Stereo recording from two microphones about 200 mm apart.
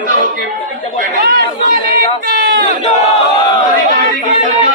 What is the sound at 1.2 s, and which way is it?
Speech, 55° right (ahead or behind).